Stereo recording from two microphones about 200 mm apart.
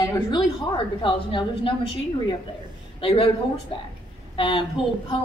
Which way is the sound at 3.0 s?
25° left (ahead or behind).